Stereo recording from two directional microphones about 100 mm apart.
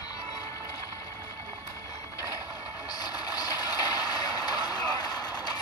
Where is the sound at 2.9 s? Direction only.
40° left (ahead or behind).